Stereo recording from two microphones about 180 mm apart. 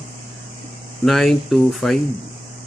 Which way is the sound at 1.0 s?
Centre (ahead or behind).